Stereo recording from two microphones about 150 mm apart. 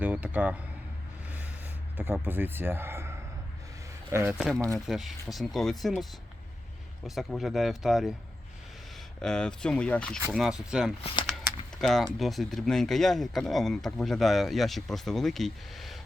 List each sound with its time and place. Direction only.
0.0 s a sound: 10° right (ahead or behind)
2.2 s speech: 15° right (ahead or behind)
4.9 s speech: centre (ahead or behind)
9.2 s speech: 5° left (ahead or behind)
10.3 s speech: 5° right (ahead or behind)
11.0 s speech: 35° left (ahead or behind)
11.8 s speech: centre (ahead or behind)